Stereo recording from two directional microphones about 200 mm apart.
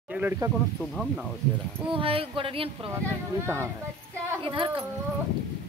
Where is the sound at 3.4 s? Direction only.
15° right (ahead or behind).